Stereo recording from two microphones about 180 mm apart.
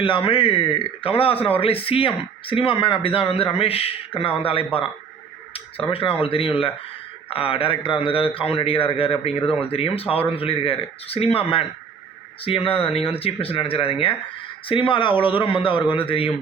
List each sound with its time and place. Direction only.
0.0 s a man's voice: 30° left (ahead or behind)
5.9 s a man's voice: 30° left (ahead or behind)